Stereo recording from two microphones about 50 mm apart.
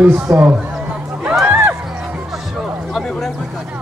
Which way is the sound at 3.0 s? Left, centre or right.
Centre.